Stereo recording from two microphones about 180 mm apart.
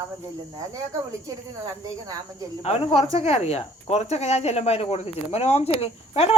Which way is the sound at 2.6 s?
30° left (ahead or behind).